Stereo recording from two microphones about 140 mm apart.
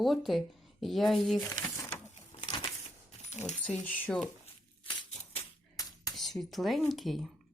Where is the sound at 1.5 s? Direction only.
15° left (ahead or behind).